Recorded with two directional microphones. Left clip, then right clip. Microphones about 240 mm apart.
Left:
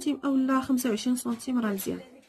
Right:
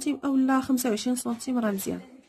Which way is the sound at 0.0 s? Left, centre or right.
Centre.